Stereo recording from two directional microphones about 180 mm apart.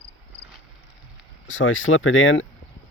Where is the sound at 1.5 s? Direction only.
90° left.